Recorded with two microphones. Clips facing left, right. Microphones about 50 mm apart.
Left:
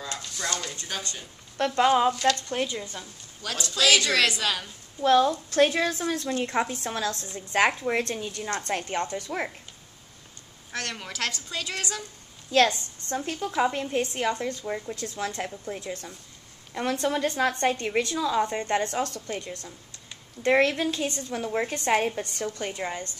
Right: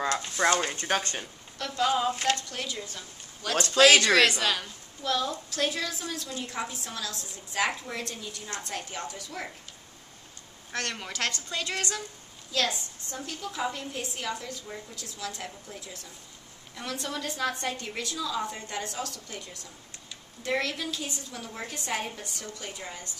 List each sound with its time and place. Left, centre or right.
0.0 s speech: right
1.6 s a woman's voice: left
2.1 s speech: right
2.5 s a woman's voice: left
3.7 s speech: right
4.4 s a woman's voice: centre
5.0 s a woman's voice: left
10.7 s a woman's voice: centre
12.4 s a woman's voice: left